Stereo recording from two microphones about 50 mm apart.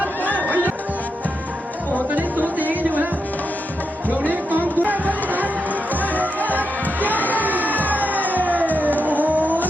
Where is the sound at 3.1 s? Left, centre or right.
Left.